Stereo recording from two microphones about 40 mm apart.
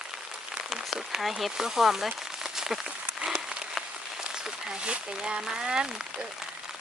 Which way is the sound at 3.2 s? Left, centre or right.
Centre.